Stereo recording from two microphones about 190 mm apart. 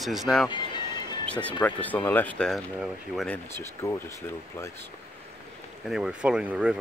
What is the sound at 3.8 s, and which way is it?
Speech, 15° left (ahead or behind).